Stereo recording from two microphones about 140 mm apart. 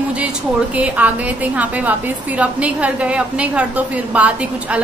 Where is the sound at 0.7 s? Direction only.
10° right (ahead or behind).